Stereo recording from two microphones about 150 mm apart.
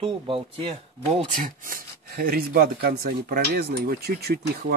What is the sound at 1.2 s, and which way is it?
Speech, 65° right (ahead or behind).